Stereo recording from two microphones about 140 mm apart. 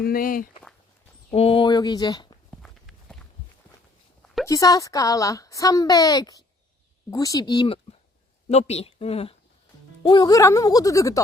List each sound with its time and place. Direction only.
0.0 s speech: 90° left
1.3 s speech: 40° left (ahead or behind)
1.7 s speech: 30° left (ahead or behind)
2.6 s walk: 5° left (ahead or behind)
4.4 s speech: 25° left (ahead or behind)
8.4 s speech: 50° left (ahead or behind)
10.0 s speech: 35° left (ahead or behind)